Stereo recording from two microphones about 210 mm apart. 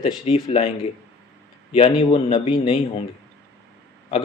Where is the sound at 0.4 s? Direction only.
25° left (ahead or behind).